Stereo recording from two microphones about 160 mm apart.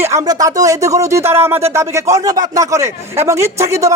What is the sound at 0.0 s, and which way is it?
A man's voice, 20° right (ahead or behind).